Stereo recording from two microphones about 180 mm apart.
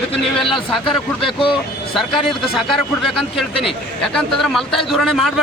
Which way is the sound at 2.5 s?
Centre (ahead or behind).